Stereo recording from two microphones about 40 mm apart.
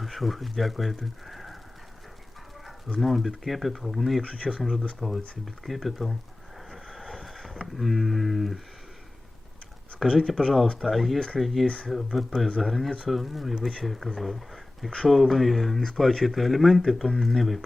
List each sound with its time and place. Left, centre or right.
0.0 s speech: centre
3.0 s speech: centre
6.7 s vehicle: centre
7.8 s speech: centre
10.1 s speech: centre
10.8 s speech: centre
11.6 s speech: left
11.9 s speech: centre